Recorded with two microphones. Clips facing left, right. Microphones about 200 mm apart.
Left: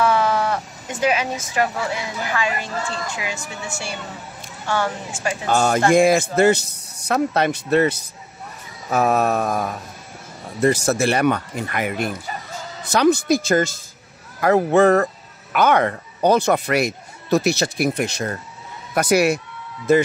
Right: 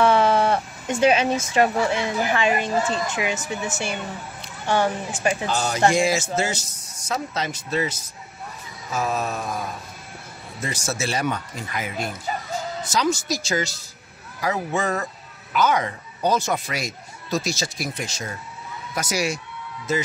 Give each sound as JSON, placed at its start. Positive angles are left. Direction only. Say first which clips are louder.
{"t": 0.0, "sound": "a woman's voice", "louder": "right 1 dB", "side_deg": -25}
{"t": 5.5, "sound": "speech", "louder": "left 7 dB", "side_deg": 50}